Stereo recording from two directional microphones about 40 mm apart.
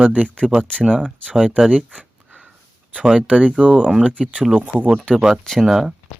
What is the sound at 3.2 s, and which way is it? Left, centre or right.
Speech, right.